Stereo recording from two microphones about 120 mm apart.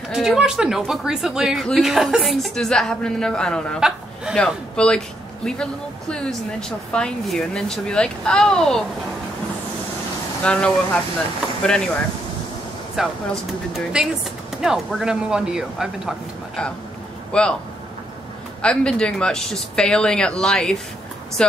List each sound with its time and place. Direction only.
0.1 s a man's voice: 5° right (ahead or behind)
4.7 s speech: 5° left (ahead or behind)
10.4 s speech: 10° left (ahead or behind)
17.3 s speech: 10° left (ahead or behind)
18.6 s speech: 10° left (ahead or behind)